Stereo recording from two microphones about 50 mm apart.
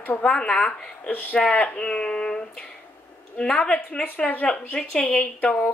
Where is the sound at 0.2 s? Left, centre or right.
Centre.